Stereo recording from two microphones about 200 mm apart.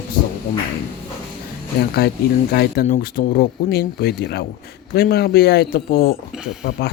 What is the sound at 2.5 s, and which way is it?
Speech, 50° left (ahead or behind).